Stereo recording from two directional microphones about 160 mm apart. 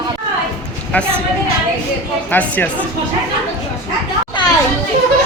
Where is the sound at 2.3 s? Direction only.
10° left (ahead or behind).